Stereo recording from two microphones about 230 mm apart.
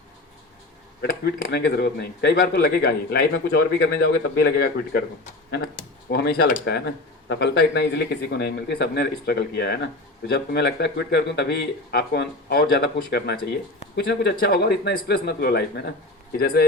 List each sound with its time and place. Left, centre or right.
1.2 s speech: left